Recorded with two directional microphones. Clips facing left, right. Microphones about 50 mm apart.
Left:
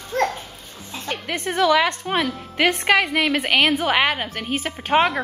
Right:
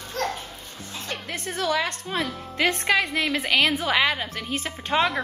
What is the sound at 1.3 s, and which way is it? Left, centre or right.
Speech, left.